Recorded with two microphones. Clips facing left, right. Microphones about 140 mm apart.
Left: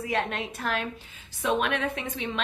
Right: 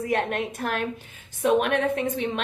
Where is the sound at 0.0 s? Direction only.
50° right (ahead or behind).